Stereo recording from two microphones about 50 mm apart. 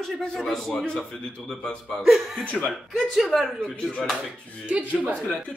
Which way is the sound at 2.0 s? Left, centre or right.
Centre.